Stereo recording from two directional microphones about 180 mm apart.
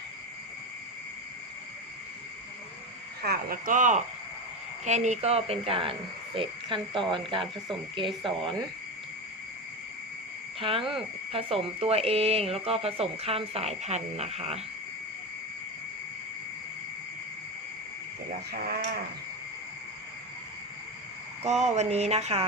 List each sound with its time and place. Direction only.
3.2 s speech: 55° right (ahead or behind)
4.9 s frog: 40° right (ahead or behind)
10.6 s speech: 30° right (ahead or behind)
18.5 s speech: 60° right (ahead or behind)
21.4 s speech: 40° right (ahead or behind)